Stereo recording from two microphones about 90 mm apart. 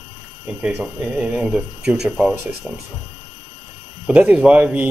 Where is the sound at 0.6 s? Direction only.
15° right (ahead or behind).